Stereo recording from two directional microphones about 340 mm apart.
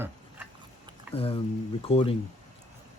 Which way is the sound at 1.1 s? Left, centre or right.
Centre.